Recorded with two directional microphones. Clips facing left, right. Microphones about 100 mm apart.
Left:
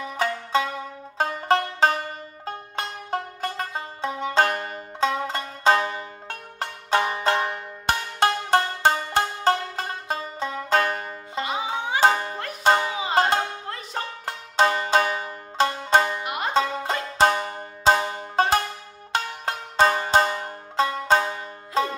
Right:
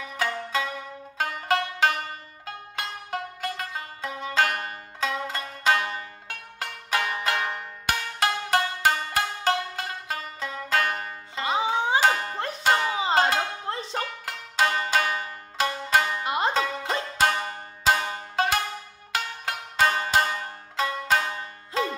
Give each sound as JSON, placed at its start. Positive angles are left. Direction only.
{"t": 0.2, "sound": "music", "side_deg": 30}
{"t": 11.4, "sound": "music", "side_deg": -30}
{"t": 12.0, "sound": "music", "side_deg": 25}
{"t": 12.9, "sound": "banjo", "side_deg": -30}
{"t": 13.9, "sound": "banjo", "side_deg": 30}
{"t": 16.3, "sound": "music", "side_deg": -30}
{"t": 17.2, "sound": "music", "side_deg": 30}